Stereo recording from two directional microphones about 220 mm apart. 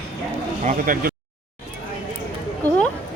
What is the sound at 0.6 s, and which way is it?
Speech, 35° right (ahead or behind).